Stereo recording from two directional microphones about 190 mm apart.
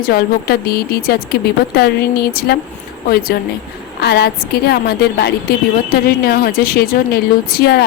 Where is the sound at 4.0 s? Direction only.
60° left (ahead or behind).